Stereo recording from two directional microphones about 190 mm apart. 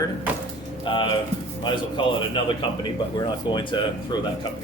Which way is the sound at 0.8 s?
25° left (ahead or behind).